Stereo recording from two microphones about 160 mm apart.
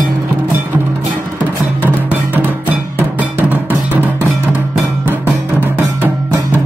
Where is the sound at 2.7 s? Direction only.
10° right (ahead or behind).